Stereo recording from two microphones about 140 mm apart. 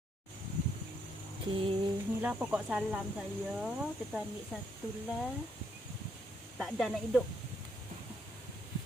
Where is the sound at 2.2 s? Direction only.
10° right (ahead or behind).